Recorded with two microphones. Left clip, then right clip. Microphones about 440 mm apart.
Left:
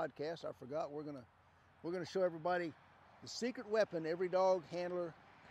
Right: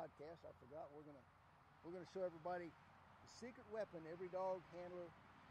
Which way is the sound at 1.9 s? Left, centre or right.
Left.